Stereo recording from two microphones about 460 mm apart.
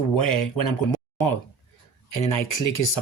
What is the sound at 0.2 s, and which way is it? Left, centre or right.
Speech, left.